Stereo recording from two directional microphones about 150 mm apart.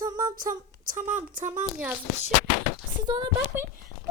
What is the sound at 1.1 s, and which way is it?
Speech, 55° right (ahead or behind).